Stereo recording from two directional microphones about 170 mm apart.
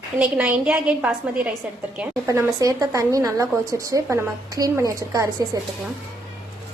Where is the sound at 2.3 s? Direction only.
20° right (ahead or behind).